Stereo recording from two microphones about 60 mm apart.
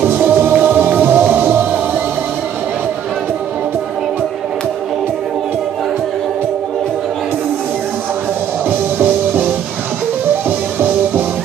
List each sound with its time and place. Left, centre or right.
0.0 s music: right
8.6 s music: right